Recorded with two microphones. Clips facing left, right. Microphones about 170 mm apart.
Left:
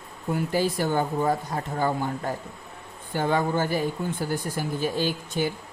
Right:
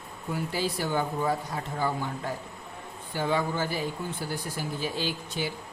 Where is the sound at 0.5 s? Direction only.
50° left (ahead or behind).